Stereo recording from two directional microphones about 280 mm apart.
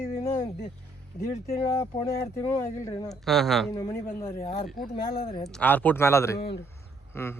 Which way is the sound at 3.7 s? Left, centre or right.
Centre.